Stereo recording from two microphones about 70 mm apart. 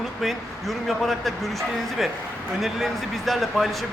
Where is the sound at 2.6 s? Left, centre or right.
Centre.